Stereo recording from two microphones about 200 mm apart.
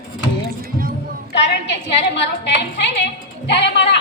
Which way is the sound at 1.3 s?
60° left (ahead or behind).